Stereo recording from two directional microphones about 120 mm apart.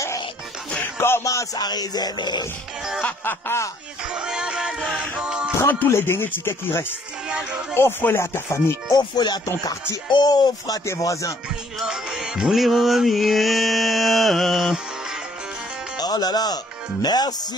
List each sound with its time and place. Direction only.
0.9 s speech: 20° left (ahead or behind); by 2.4 s 35° left (ahead or behind)
3.0 s speech: 15° left (ahead or behind)
4.1 s music: 5° right (ahead or behind)
5.6 s speech: 20° left (ahead or behind)
7.2 s music: 5° right (ahead or behind)
7.7 s speech: 20° left (ahead or behind)
8.9 s speech: 35° left (ahead or behind)
11.8 s music: 5° right (ahead or behind)
16.0 s speech: 35° left (ahead or behind)